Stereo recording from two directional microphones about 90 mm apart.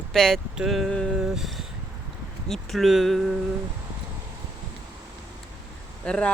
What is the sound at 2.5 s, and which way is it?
Speech, centre (ahead or behind).